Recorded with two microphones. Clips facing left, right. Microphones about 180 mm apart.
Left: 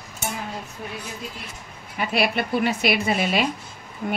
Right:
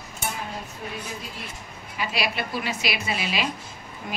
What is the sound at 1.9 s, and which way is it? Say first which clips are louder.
A woman's voice: left 5 dB; 55° left (ahead or behind).